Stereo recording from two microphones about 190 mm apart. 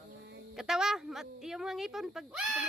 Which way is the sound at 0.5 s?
5° right (ahead or behind).